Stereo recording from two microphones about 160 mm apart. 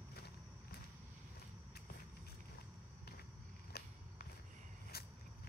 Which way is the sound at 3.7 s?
85° left.